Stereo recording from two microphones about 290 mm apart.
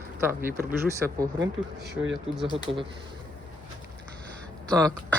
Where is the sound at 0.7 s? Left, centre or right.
Centre.